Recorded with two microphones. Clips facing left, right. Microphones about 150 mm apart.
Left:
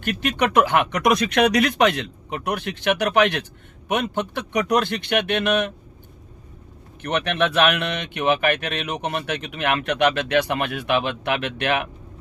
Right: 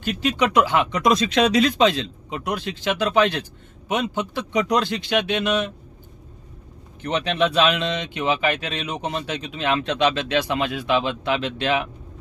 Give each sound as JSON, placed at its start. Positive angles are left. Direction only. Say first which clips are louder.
{"t": 0.0, "sound": "speech", "louder": "right 1 dB", "side_deg": 60}
{"t": 7.0, "sound": "speech", "louder": "right 1 dB", "side_deg": 60}